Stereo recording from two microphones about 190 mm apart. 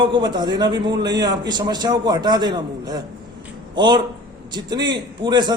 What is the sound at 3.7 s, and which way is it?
A man's voice, 25° right (ahead or behind).